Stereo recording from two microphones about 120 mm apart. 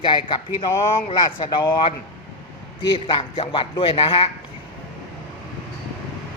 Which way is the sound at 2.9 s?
45° left (ahead or behind).